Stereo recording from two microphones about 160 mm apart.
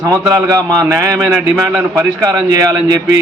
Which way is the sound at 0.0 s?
20° right (ahead or behind).